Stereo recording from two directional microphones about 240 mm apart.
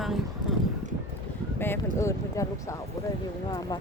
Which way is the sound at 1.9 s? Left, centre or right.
Centre.